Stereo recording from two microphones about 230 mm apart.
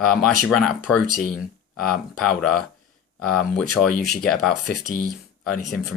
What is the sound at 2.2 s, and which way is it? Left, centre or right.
Speech, centre.